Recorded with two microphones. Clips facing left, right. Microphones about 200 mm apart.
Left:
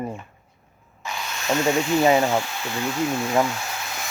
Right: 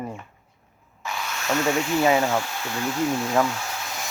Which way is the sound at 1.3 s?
25° left (ahead or behind).